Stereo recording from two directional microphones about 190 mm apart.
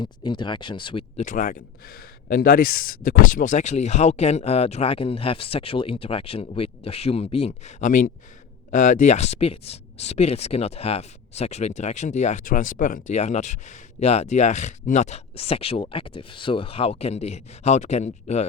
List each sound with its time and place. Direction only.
0.0 s speech: 25° left (ahead or behind)
1.2 s speech: 45° left (ahead or behind)